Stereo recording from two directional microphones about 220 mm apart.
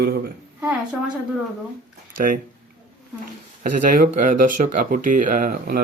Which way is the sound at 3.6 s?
40° right (ahead or behind).